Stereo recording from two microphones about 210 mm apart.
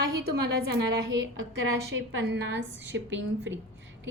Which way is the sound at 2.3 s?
60° right (ahead or behind).